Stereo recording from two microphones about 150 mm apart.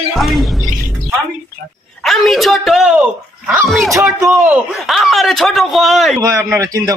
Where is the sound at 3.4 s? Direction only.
10° right (ahead or behind).